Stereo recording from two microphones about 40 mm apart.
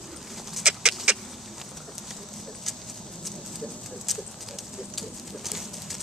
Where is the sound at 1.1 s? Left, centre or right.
Centre.